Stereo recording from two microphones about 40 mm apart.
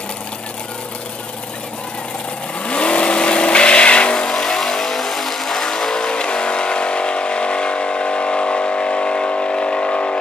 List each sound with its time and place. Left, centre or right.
2.6 s vehicle: left
4.1 s vehicle: centre